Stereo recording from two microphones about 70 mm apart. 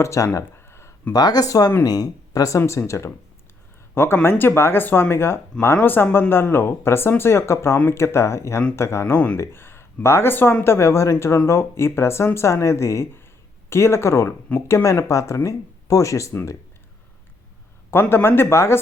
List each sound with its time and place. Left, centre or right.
0.0 s speech: left
0.5 s a sound: left
1.1 s speech: left
2.6 s speech: left
3.9 s speech: left
9.1 s speech: left
17.9 s speech: left